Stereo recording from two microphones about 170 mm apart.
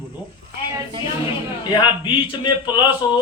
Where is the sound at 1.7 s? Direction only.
30° left (ahead or behind).